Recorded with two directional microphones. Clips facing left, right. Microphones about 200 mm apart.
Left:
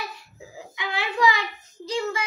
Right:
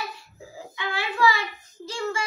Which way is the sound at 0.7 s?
15° left (ahead or behind).